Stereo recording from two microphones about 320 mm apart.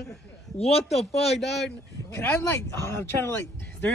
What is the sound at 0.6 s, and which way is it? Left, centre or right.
Speech, centre.